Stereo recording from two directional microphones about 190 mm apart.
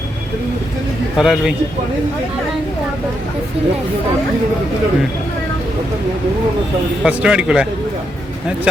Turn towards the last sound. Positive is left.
turn(degrees=-5)  # may be behind; listen again after turning